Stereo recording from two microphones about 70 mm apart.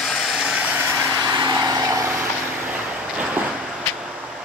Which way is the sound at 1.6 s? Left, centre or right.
Right.